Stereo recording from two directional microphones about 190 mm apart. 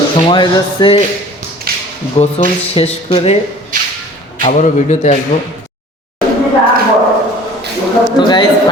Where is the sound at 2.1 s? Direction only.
30° left (ahead or behind).